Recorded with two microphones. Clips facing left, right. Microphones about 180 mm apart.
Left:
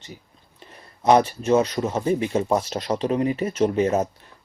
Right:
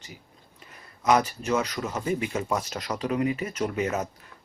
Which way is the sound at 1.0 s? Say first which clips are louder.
Left 5 dB; 30° left (ahead or behind).